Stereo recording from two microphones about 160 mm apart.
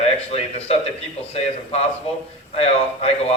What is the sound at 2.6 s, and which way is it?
Speech, 35° left (ahead or behind).